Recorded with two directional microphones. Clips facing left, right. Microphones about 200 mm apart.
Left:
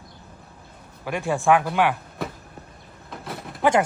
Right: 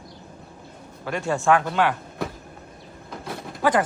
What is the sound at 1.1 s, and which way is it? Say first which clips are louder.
Speech: left 1 dB; 15° left (ahead or behind).